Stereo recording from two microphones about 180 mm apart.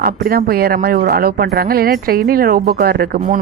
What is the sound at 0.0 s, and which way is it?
Speech, 60° right (ahead or behind).